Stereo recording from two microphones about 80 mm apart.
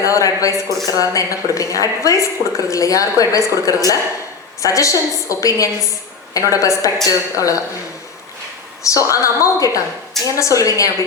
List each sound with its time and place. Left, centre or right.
0.0 s a woman's voice: left
8.8 s a woman's voice: left